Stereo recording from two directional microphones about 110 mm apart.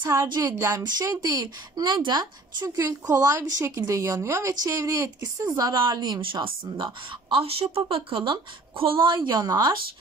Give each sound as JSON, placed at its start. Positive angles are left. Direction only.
{"t": 0.4, "sound": "a woman's voice", "side_deg": -30}
{"t": 6.2, "sound": "speech", "side_deg": -50}